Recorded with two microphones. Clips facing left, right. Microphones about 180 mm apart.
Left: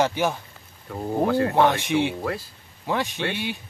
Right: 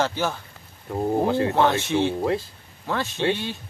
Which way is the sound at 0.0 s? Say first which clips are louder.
Left 2 dB; 15° left (ahead or behind).